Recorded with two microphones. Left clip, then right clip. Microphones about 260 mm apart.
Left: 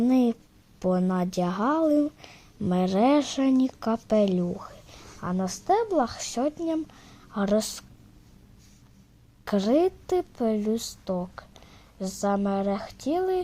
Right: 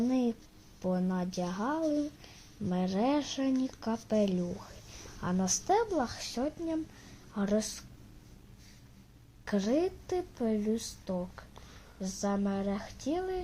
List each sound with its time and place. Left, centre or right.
0.0 s a sound: left
0.8 s a woman's voice: left
5.2 s a woman's voice: centre; by 7.9 s left
9.4 s a woman's voice: left